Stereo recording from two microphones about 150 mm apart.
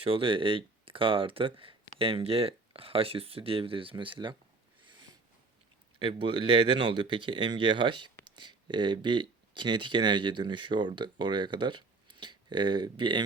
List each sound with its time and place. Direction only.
0.0 s speech: 35° right (ahead or behind)
6.0 s speech: 35° right (ahead or behind)